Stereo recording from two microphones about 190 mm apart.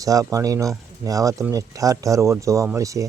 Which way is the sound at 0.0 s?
20° right (ahead or behind).